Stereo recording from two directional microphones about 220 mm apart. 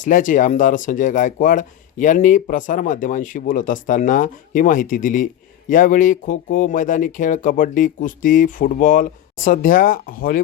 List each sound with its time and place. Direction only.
0.0 s speech: 35° left (ahead or behind)